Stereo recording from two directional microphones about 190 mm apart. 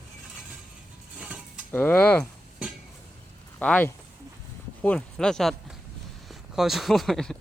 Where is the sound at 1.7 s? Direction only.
10° left (ahead or behind).